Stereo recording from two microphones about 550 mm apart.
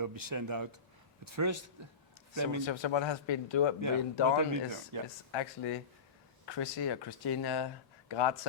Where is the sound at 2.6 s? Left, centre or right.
Left.